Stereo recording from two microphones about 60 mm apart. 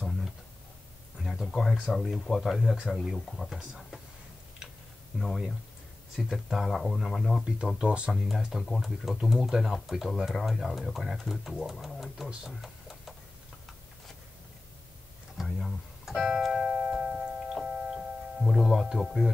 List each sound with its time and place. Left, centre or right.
0.0 s a sound: centre
1.2 s speech: centre
5.2 s speech: centre
7.4 s speech: centre
8.1 s speech: centre
12.4 s a sound: centre
15.3 s music: centre
18.4 s speech: centre